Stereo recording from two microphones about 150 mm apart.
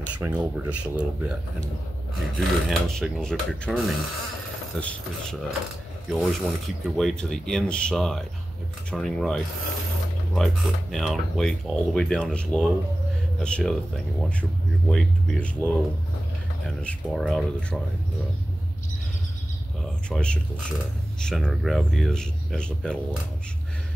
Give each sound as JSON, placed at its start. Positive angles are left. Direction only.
{"t": 0.2, "sound": "speech", "side_deg": -10}
{"t": 14.9, "sound": "speech", "side_deg": 5}
{"t": 19.8, "sound": "speech", "side_deg": 5}